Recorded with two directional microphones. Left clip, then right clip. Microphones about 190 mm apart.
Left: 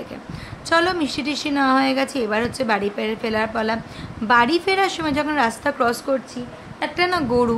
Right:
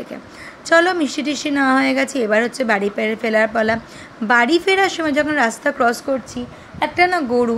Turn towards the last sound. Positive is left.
turn(degrees=-10)  # may be behind; listen again after turning